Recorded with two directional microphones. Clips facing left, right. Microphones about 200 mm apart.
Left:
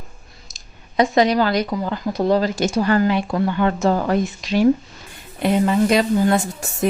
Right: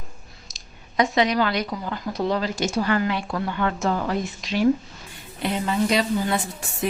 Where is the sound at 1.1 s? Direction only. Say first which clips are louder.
Left 6 dB; 40° left (ahead or behind).